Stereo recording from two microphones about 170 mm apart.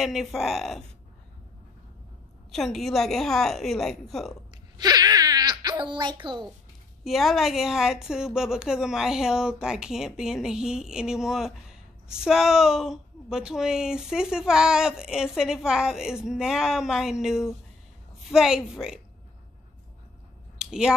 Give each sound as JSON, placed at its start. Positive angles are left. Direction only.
{"t": 0.0, "sound": "speech", "side_deg": 0}
{"t": 2.5, "sound": "speech", "side_deg": 0}
{"t": 4.7, "sound": "wail", "side_deg": -25}
{"t": 7.1, "sound": "speech", "side_deg": 0}
{"t": 20.5, "sound": "a sound", "side_deg": -5}